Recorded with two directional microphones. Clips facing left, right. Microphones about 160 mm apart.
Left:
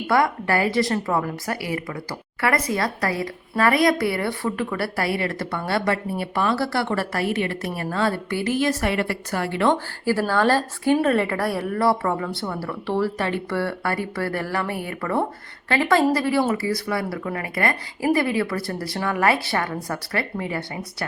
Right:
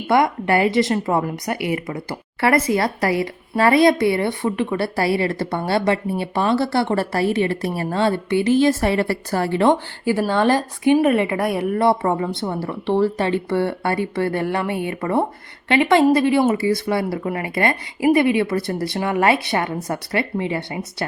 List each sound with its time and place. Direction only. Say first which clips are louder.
0.1 s speech: right 4 dB; 20° right (ahead or behind)